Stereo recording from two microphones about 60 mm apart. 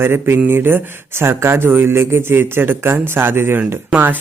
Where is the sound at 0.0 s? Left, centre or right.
Right.